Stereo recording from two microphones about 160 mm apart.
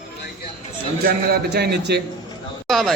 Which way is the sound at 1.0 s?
85° right.